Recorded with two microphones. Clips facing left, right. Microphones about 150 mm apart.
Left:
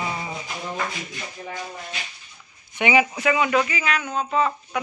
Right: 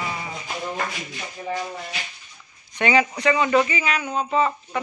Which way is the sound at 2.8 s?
10° left (ahead or behind).